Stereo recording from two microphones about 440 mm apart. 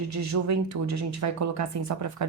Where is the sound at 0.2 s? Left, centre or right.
Right.